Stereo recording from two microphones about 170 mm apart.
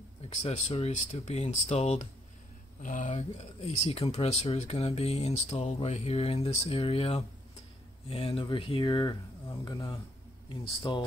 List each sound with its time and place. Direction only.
0.3 s speech: 40° left (ahead or behind)